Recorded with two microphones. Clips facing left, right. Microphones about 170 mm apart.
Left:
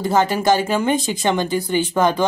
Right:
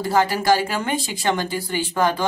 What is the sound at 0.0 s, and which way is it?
Speech, 20° left (ahead or behind).